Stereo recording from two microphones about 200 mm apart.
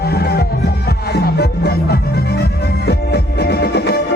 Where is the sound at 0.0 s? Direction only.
50° left (ahead or behind).